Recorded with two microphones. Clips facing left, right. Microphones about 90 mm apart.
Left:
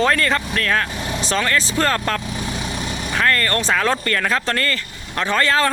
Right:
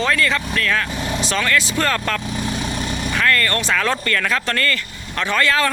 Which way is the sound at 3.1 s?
30° left (ahead or behind).